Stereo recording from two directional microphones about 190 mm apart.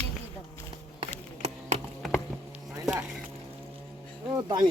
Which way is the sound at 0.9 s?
30° right (ahead or behind).